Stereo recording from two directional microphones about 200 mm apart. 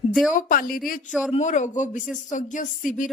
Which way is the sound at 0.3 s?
40° left (ahead or behind).